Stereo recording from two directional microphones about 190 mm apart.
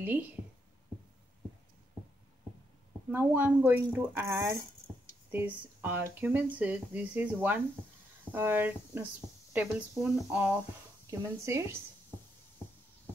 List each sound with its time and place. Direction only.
0.0 s speech: 10° right (ahead or behind)
3.1 s speech: 10° right (ahead or behind)